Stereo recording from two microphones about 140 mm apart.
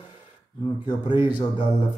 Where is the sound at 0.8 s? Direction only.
35° left (ahead or behind).